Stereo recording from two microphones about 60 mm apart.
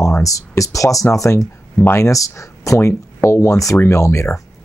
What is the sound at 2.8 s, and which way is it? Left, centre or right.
Speech, left.